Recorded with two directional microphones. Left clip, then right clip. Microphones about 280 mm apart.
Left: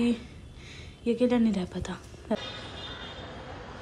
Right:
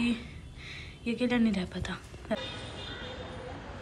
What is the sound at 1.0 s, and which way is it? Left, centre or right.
A woman's voice, centre.